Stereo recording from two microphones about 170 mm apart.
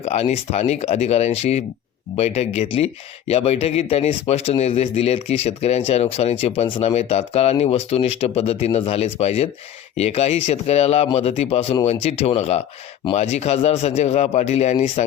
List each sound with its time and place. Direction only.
0.0 s speech: 40° left (ahead or behind)